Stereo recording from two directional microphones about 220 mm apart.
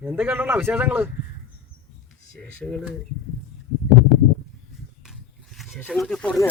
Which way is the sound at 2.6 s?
5° left (ahead or behind).